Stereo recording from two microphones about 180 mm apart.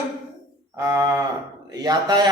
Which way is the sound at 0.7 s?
20° right (ahead or behind).